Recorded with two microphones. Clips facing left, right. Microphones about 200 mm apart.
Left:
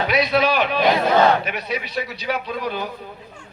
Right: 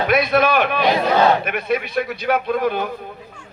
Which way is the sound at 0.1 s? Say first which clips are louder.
Right 3 dB; 50° right (ahead or behind).